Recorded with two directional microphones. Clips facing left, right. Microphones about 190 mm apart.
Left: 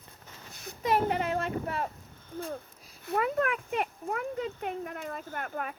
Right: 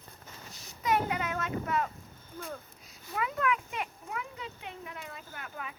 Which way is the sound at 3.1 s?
45° left (ahead or behind).